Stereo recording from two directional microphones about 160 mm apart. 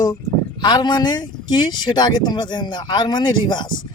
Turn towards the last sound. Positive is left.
turn(degrees=30)  # may be behind; listen again after turning